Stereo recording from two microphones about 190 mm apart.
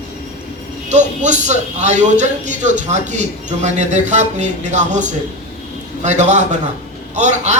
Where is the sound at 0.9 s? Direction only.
40° right (ahead or behind).